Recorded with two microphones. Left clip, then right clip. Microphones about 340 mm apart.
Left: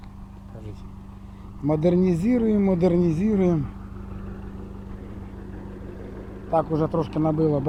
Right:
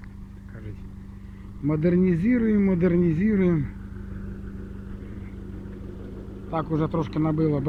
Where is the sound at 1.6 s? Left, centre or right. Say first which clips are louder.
Left 2 dB; centre.